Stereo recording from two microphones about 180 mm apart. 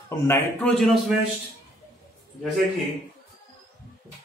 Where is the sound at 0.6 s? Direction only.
5° left (ahead or behind).